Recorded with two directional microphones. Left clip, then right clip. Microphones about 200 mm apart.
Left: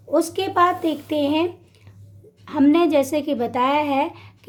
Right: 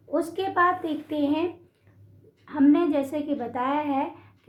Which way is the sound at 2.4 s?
50° left (ahead or behind).